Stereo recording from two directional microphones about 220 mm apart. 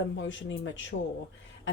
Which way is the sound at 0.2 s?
55° left (ahead or behind).